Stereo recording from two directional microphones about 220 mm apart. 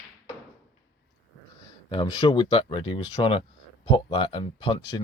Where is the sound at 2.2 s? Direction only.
20° left (ahead or behind).